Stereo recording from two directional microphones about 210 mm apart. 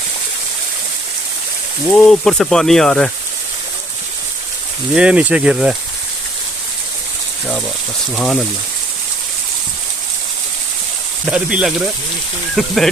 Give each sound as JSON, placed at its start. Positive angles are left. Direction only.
{"t": 1.9, "sound": "speech", "side_deg": 5}
{"t": 4.9, "sound": "speech", "side_deg": -5}
{"t": 8.1, "sound": "speech", "side_deg": 5}
{"t": 11.3, "sound": "speech", "side_deg": -5}